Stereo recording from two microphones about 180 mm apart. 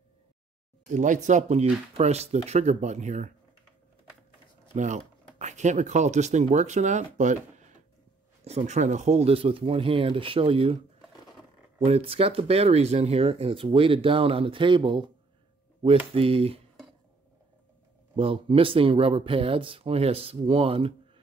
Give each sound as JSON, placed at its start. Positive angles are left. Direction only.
{"t": 0.8, "sound": "speech", "side_deg": -45}
{"t": 4.7, "sound": "speech", "side_deg": -40}
{"t": 11.8, "sound": "speech", "side_deg": -35}
{"t": 16.1, "sound": "speech", "side_deg": -30}
{"t": 18.1, "sound": "speech", "side_deg": -30}